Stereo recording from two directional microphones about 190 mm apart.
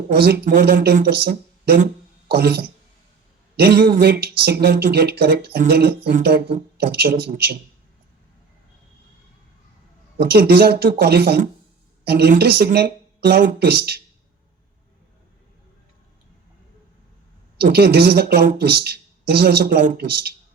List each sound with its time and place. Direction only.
0.1 s speech: 50° right (ahead or behind)
10.2 s speech: 55° right (ahead or behind)
13.6 s speech: 55° right (ahead or behind)
17.6 s speech: 55° right (ahead or behind)